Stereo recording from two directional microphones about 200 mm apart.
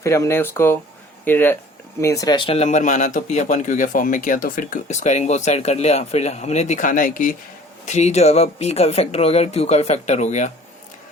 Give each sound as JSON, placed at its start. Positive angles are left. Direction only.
{"t": 0.0, "sound": "speech", "side_deg": 15}